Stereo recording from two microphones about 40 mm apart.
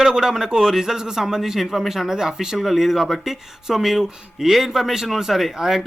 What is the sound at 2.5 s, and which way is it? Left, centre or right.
Speech, centre.